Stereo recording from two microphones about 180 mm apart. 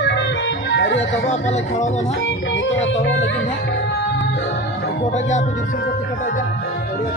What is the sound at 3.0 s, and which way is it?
Music, 90° left.